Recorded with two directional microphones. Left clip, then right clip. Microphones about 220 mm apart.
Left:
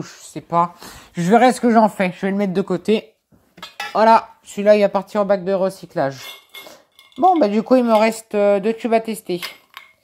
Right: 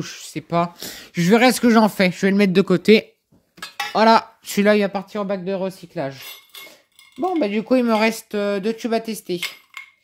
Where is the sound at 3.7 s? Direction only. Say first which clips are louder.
Left 2 dB; 30° right (ahead or behind).